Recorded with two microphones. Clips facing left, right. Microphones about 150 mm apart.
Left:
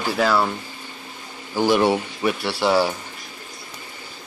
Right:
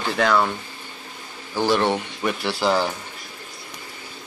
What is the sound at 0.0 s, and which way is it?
Speech, 5° left (ahead or behind).